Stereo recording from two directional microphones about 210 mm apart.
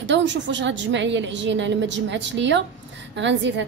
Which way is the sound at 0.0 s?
60° right (ahead or behind).